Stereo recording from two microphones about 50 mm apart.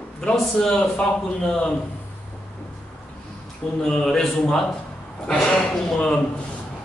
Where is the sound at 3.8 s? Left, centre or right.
Centre.